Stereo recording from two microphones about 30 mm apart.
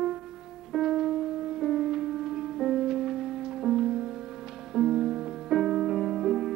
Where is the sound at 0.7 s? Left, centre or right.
Centre.